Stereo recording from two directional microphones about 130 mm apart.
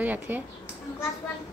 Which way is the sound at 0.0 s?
15° right (ahead or behind).